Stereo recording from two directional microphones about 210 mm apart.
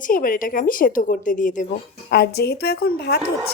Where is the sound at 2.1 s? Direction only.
50° left (ahead or behind).